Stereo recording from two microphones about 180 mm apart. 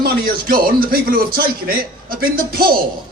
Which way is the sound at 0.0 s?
55° right (ahead or behind).